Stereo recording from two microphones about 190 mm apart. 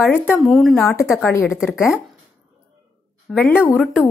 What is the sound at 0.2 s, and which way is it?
Speech, 5° left (ahead or behind).